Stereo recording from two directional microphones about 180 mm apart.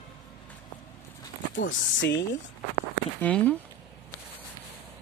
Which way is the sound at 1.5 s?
90° left.